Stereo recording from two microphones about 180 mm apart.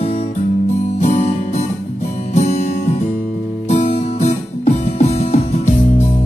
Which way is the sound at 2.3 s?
35° left (ahead or behind).